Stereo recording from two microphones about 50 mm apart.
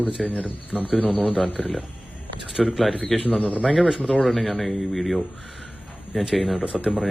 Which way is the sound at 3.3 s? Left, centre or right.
Left.